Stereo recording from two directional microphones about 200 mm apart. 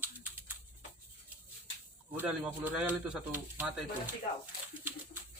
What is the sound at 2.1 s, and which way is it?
Speech, 10° right (ahead or behind).